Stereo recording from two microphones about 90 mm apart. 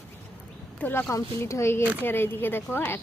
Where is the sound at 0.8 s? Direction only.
20° left (ahead or behind).